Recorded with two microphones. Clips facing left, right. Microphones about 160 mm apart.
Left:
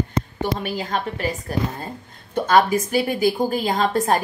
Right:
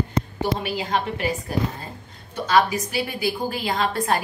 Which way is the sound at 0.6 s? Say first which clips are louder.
Even; 45° left (ahead or behind).